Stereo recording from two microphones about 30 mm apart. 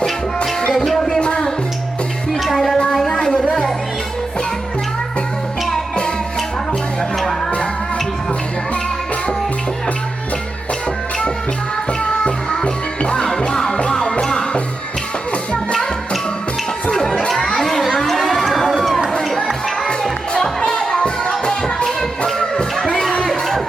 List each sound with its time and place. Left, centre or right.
0.9 s a sound: centre
1.2 s music: left
2.4 s music: centre
3.1 s a sound: left
12.6 s music: left
13.8 s music: centre
16.9 s crowd: centre
17.6 s children playing: centre
17.9 s run: centre
19.5 s music: centre
20.4 s music: centre; by 22.3 s left
22.3 s music: centre
23.3 s music: centre